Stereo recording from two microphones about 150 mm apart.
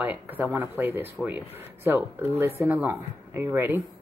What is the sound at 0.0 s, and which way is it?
Speech, 10° right (ahead or behind).